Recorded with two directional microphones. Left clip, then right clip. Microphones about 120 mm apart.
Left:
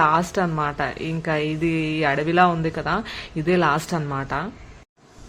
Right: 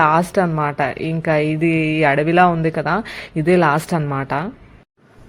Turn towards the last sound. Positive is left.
turn(degrees=-40)  # may be behind; listen again after turning